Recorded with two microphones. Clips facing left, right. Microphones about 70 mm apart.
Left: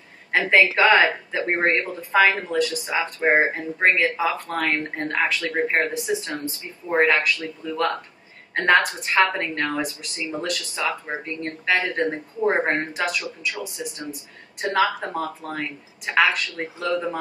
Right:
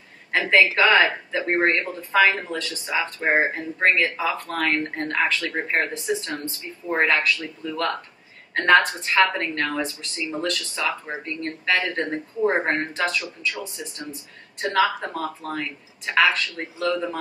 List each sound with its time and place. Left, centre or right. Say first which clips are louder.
0.3 s a woman's voice: left 1 dB; centre